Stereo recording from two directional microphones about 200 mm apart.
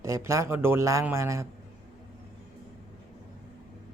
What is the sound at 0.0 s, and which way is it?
A man's voice, 15° right (ahead or behind).